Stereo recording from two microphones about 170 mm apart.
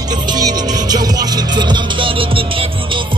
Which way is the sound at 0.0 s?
25° right (ahead or behind).